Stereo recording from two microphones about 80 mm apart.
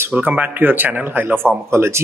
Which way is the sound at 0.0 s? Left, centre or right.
Right.